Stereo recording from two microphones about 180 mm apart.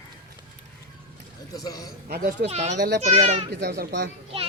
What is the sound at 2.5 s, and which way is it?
Speech, 40° right (ahead or behind).